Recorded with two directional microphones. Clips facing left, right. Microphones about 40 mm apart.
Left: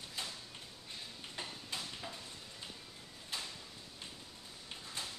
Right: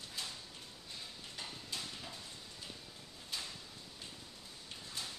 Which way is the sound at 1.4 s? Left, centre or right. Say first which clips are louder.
Left 1 dB; centre.